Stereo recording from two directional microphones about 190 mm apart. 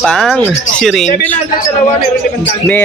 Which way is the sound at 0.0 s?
Centre (ahead or behind).